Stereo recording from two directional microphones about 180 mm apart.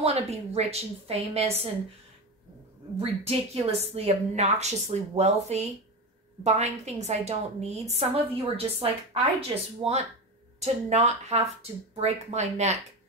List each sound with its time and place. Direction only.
0.0 s a woman's voice: 35° right (ahead or behind)
3.0 s a woman's voice: 35° right (ahead or behind)